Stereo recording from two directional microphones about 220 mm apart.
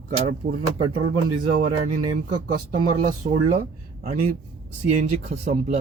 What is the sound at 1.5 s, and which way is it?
Speech, 40° right (ahead or behind).